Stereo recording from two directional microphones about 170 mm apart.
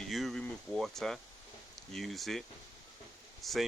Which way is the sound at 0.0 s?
Centre (ahead or behind).